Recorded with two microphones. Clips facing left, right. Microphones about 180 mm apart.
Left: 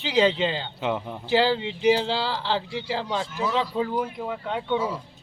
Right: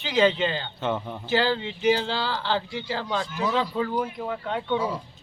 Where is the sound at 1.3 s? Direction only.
30° left (ahead or behind).